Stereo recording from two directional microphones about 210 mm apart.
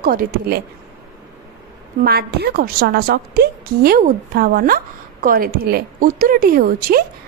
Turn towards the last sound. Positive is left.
turn(degrees=-45)  # may be behind; listen again after turning